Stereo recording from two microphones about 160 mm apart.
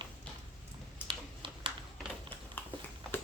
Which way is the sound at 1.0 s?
30° right (ahead or behind).